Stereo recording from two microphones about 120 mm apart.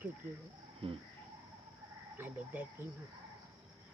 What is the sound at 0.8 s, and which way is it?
Cricket, 50° right (ahead or behind).